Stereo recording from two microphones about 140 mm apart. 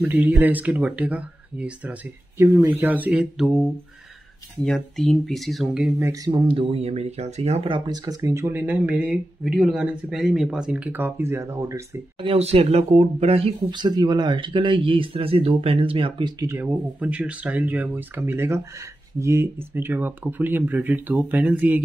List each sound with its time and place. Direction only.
0.0 s speech: 15° right (ahead or behind)
4.6 s speech: 5° left (ahead or behind)
5.9 s speech: 20° right (ahead or behind)
6.3 s speech: 40° right (ahead or behind); by 12.0 s 20° right (ahead or behind)
12.2 s speech: 45° right (ahead or behind)
13.7 s speech: 30° right (ahead or behind)
17.0 s speech: 10° right (ahead or behind)